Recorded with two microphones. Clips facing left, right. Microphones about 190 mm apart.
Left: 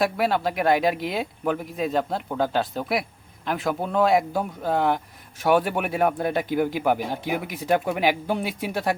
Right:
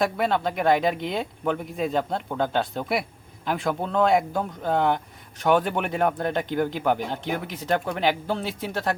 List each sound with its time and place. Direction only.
0.0 s speech: 5° left (ahead or behind)